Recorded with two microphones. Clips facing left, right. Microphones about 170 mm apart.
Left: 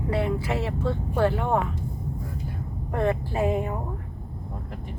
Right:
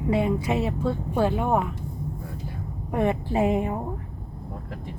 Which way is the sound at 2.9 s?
15° right (ahead or behind).